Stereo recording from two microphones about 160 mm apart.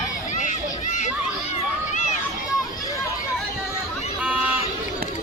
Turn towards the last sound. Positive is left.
turn(degrees=-10)  # may be behind; listen again after turning